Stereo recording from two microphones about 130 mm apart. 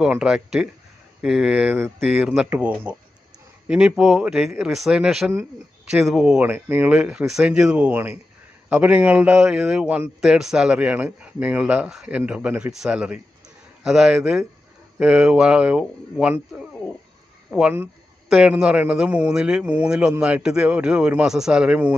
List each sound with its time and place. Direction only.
0.0 s a man's voice: 5° right (ahead or behind)
2.0 s a man's voice: 5° right (ahead or behind)